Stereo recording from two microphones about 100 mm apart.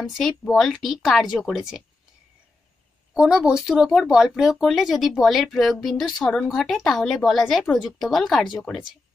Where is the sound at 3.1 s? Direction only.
5° right (ahead or behind).